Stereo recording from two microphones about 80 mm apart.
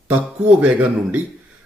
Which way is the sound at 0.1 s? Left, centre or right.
Centre.